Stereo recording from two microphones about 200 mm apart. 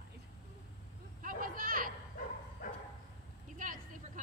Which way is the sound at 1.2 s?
45° right (ahead or behind).